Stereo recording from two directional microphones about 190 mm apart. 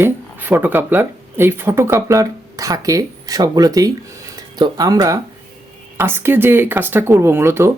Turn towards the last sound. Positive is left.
turn(degrees=-15)  # may be behind; listen again after turning